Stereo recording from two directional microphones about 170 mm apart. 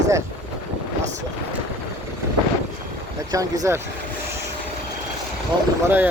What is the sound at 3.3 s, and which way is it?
Speech, 20° right (ahead or behind).